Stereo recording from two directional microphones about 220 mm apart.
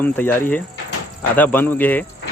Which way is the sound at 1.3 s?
10° left (ahead or behind).